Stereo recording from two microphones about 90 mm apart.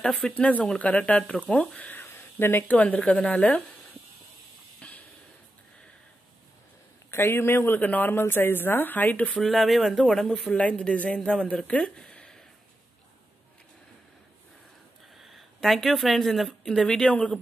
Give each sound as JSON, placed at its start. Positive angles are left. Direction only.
{"t": 0.0, "sound": "speech", "side_deg": 5}
{"t": 4.8, "sound": "music", "side_deg": 15}
{"t": 7.1, "sound": "a woman's voice", "side_deg": 30}
{"t": 9.4, "sound": "speech", "side_deg": 0}
{"t": 15.1, "sound": "a woman's voice", "side_deg": 0}